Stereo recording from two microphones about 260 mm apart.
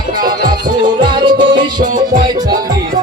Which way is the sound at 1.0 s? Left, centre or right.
Centre.